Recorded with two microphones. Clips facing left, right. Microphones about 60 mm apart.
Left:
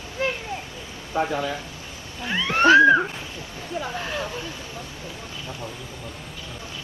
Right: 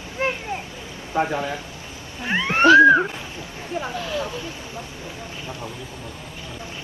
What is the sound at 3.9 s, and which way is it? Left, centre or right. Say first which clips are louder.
Speech: right 2 dB; left.